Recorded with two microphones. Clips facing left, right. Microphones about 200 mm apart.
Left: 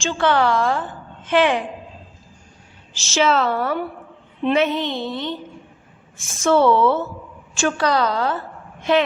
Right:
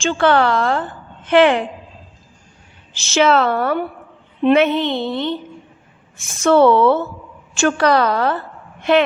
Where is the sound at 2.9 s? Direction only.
60° right (ahead or behind).